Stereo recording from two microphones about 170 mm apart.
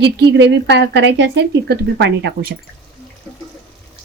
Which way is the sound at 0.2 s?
85° right.